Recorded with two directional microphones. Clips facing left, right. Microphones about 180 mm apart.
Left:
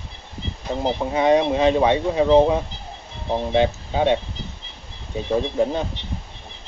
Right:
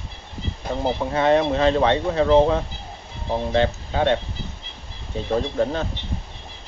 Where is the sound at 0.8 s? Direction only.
15° left (ahead or behind).